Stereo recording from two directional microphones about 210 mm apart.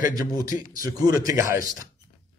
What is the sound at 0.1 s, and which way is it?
A man's voice, 15° right (ahead or behind).